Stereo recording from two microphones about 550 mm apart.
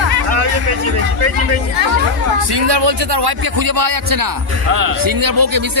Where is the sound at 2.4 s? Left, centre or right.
Right.